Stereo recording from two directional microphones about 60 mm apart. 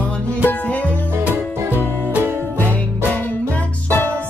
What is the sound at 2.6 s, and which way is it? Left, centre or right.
Music, left.